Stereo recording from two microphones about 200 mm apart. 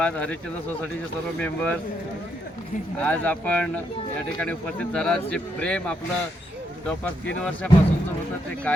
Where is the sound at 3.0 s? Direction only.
10° left (ahead or behind).